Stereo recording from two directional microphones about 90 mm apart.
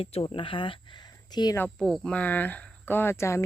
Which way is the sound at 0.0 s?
90° left.